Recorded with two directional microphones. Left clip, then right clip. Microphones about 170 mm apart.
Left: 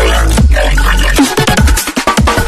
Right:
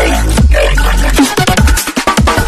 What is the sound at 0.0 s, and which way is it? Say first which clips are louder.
Music: even; centre (ahead or behind).